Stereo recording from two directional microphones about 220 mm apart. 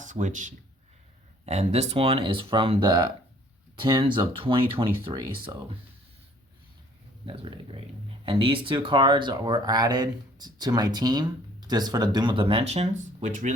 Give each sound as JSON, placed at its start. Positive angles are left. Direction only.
{"t": 0.0, "sound": "speech", "side_deg": -35}
{"t": 7.3, "sound": "speech", "side_deg": -25}